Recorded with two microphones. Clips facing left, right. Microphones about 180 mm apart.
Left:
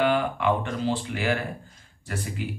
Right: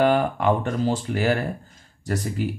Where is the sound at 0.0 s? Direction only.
40° right (ahead or behind).